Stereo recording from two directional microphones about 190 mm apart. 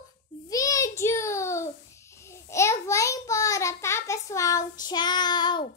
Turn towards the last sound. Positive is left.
turn(degrees=25)  # may be behind; listen again after turning